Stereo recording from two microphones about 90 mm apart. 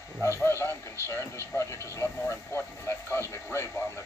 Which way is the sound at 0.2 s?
30° left (ahead or behind).